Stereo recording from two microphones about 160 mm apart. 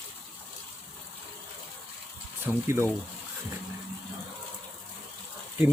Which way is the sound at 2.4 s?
15° right (ahead or behind).